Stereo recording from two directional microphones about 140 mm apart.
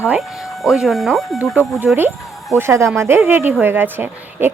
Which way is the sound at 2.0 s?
15° right (ahead or behind).